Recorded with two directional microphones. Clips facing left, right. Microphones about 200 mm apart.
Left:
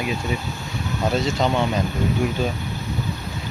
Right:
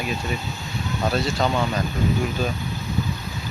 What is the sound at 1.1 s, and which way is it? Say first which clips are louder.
Speech: left 2 dB; 20° left (ahead or behind).